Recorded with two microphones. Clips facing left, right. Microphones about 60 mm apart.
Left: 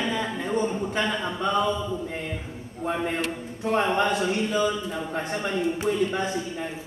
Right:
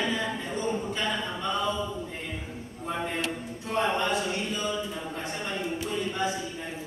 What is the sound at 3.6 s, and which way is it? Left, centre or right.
Speech, left.